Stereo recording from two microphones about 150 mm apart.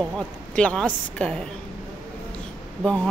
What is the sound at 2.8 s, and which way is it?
Speech, centre (ahead or behind).